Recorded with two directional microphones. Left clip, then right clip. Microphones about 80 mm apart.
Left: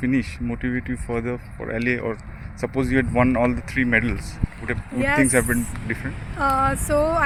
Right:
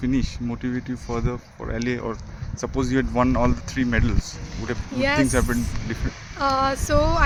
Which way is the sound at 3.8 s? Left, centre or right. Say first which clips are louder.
Left 5 dB; left.